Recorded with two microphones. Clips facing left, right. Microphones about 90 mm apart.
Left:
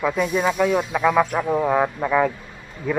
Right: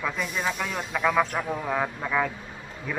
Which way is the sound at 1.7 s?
20° left (ahead or behind).